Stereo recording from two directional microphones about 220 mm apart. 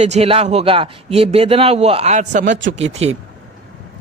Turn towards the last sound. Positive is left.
turn(degrees=-30)  # may be behind; listen again after turning